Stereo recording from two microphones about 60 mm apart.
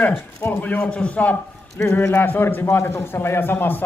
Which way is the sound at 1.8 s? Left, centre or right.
Left.